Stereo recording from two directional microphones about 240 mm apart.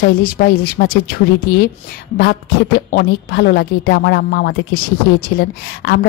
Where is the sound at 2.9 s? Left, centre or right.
Left.